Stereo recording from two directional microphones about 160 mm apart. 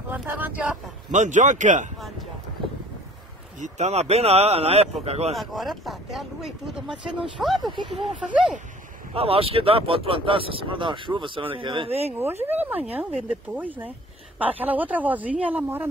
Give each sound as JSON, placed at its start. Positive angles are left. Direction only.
{"t": 0.1, "sound": "speech", "side_deg": -10}
{"t": 1.1, "sound": "speech", "side_deg": -50}
{"t": 3.5, "sound": "speech", "side_deg": -50}
{"t": 5.3, "sound": "speech", "side_deg": 0}
{"t": 7.6, "sound": "speech", "side_deg": -30}
{"t": 8.1, "sound": "speech", "side_deg": -5}
{"t": 9.1, "sound": "speech", "side_deg": -35}
{"t": 12.1, "sound": "speech", "side_deg": -15}